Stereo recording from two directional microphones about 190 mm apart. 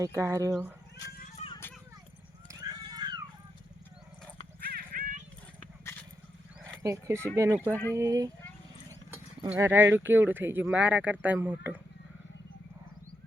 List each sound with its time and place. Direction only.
0.0 s speech: 15° right (ahead or behind)
1.4 s children playing: 35° left (ahead or behind)
2.5 s a sound: 20° right (ahead or behind)
4.6 s horse: 50° right (ahead or behind)
6.8 s speech: 15° right (ahead or behind)
9.5 s speech: 15° right (ahead or behind)